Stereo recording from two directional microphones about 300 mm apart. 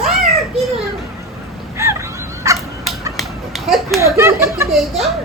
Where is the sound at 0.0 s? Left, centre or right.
Centre.